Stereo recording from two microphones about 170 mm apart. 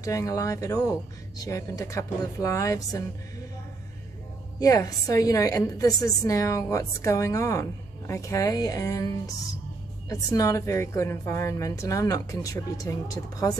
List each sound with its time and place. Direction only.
0.0 s a woman's voice: 20° left (ahead or behind)
4.6 s a woman's voice: 20° left (ahead or behind)